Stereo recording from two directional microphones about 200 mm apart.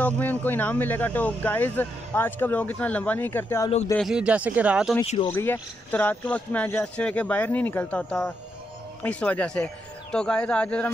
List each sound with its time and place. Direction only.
0.0 s speech: 10° left (ahead or behind)
3.9 s speech: centre (ahead or behind)
5.0 s speech: 35° left (ahead or behind)
5.3 s speech: 10° left (ahead or behind)